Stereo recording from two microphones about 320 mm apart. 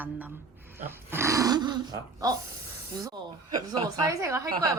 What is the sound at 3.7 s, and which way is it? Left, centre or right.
Speech, centre.